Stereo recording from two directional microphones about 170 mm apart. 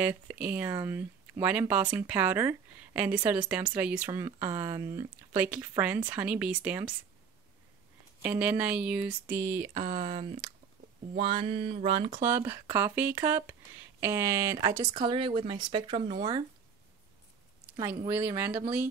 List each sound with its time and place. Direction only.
0.0 s speech: 10° right (ahead or behind)
8.2 s speech: 10° right (ahead or behind)
9.8 s speech: 45° right (ahead or behind)
11.1 s a sound: 35° right (ahead or behind)
12.2 s speech: 15° right (ahead or behind)
17.7 s speech: 20° right (ahead or behind)